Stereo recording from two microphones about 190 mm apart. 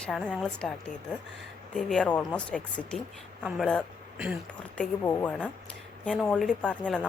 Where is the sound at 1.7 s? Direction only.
5° left (ahead or behind).